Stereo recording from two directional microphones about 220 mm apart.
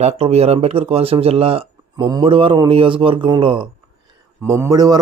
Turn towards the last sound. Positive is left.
turn(degrees=-15)  # may be behind; listen again after turning